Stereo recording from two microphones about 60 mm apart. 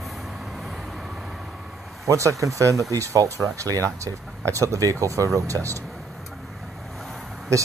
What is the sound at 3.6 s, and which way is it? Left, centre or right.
Speech, right.